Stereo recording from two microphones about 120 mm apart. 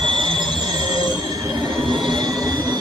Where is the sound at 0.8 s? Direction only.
35° right (ahead or behind).